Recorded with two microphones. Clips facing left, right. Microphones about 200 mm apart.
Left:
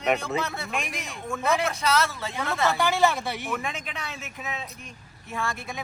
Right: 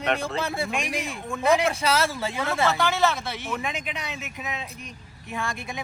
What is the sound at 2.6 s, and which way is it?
Speech, 15° left (ahead or behind).